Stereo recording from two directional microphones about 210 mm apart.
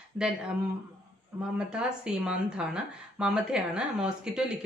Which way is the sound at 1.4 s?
5° right (ahead or behind).